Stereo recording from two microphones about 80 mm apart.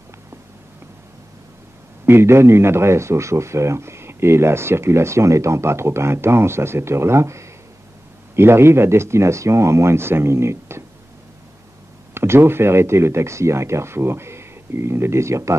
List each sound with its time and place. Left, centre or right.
2.0 s a man's voice: right
12.1 s a man's voice: right